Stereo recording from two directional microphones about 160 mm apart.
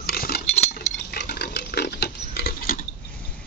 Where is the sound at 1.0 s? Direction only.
90° left; by 2.8 s 70° left (ahead or behind).